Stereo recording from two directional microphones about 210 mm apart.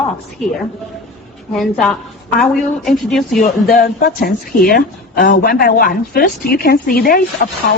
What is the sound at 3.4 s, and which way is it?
A woman's voice, 40° left (ahead or behind).